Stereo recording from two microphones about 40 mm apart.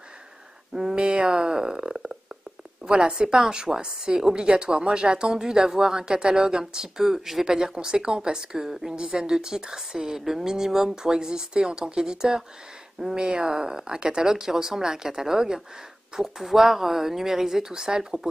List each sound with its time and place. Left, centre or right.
0.7 s a sound: right
2.9 s a woman's voice: right
9.0 s a woman's voice: right
9.3 s speech: centre